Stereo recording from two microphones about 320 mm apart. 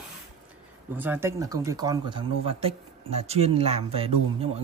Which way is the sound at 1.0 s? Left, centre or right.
Centre.